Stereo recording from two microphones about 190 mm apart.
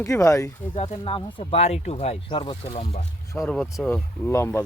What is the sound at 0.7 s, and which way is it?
Speech, 30° left (ahead or behind).